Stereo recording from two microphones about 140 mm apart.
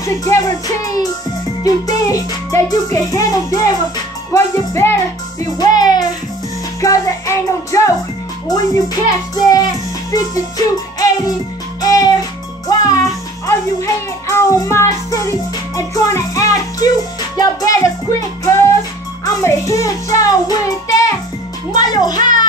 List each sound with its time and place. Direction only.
0.0 s music: 25° left (ahead or behind)
4.3 s speech: 15° left (ahead or behind)
5.6 s music: 30° left (ahead or behind)
11.8 s music: 25° left (ahead or behind)
13.5 s a child's voice: 20° left (ahead or behind)
17.4 s music: 25° left (ahead or behind)
19.2 s music: 25° left (ahead or behind)
22.2 s a child's voice: 70° right (ahead or behind)